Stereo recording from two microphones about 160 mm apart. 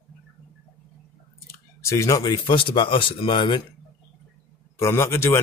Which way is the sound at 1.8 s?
20° left (ahead or behind).